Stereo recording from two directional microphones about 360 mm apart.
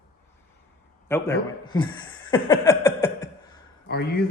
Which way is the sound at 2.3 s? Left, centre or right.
Centre.